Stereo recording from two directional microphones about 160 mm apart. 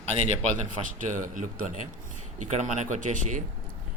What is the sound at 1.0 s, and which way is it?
A man's voice, 55° right (ahead or behind).